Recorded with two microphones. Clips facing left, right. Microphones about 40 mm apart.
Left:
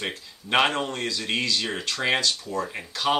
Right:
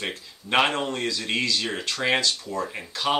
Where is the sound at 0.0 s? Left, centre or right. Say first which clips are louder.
Even; centre.